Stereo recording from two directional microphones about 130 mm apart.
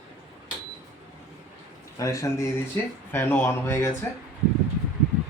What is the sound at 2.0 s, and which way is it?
Speech, 25° left (ahead or behind).